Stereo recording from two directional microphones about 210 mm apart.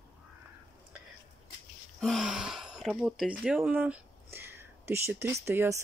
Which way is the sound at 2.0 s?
Centre (ahead or behind).